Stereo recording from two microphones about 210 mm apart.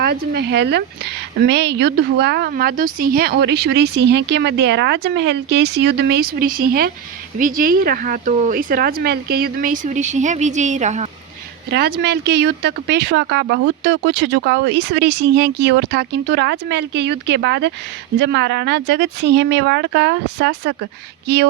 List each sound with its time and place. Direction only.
0.0 s speech: 50° right (ahead or behind); by 11.1 s 35° right (ahead or behind)
11.7 s speech: 50° right (ahead or behind)